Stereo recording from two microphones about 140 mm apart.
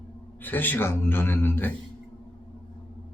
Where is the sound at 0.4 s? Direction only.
15° left (ahead or behind).